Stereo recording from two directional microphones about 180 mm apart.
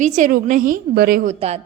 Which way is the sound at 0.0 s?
45° right (ahead or behind).